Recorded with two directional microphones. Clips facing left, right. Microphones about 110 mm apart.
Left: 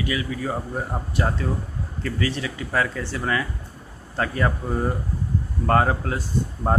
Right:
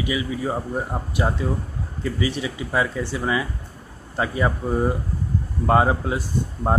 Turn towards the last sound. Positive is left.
turn(degrees=-10)  # may be behind; listen again after turning